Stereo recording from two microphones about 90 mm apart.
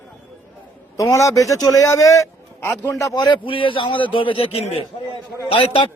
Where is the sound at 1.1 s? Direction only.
35° left (ahead or behind).